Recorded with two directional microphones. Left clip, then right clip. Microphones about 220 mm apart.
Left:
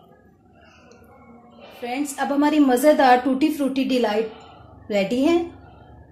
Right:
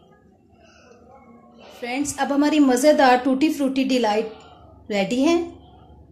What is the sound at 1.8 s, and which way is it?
A woman's voice, 10° right (ahead or behind).